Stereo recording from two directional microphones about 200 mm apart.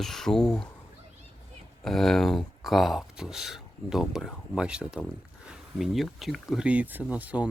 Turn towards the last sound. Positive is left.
turn(degrees=-5)  # may be behind; listen again after turning